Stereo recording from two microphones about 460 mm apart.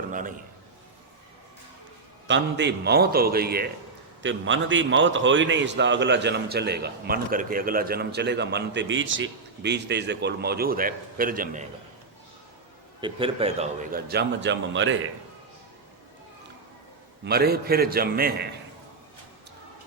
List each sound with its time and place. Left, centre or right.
0.1 s a sound: centre
2.2 s a man's voice: right
13.0 s a man's voice: centre
17.2 s a man's voice: centre